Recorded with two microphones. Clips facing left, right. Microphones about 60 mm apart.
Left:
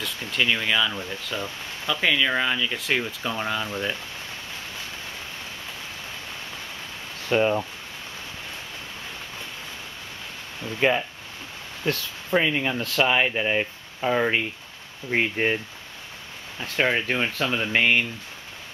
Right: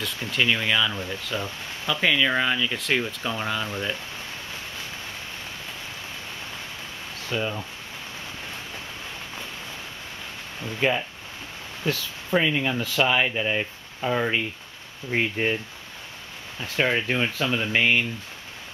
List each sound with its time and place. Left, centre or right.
0.0 s speech: centre
7.2 s speech: left
11.8 s speech: centre
16.7 s speech: centre